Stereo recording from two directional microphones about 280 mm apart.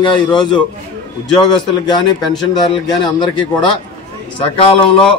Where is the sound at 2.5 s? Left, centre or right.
Centre.